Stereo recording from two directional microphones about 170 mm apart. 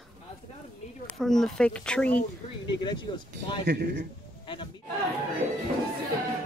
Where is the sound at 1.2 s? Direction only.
Centre (ahead or behind).